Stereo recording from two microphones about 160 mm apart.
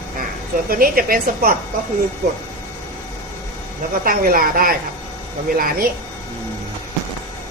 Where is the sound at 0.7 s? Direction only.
65° right (ahead or behind).